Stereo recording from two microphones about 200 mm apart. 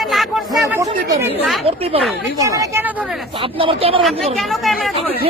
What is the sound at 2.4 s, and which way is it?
Speech, 15° right (ahead or behind).